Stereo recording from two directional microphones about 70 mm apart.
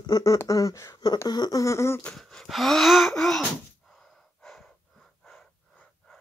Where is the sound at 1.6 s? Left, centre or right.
Left.